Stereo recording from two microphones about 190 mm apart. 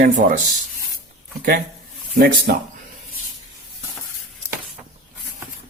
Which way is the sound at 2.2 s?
55° right (ahead or behind).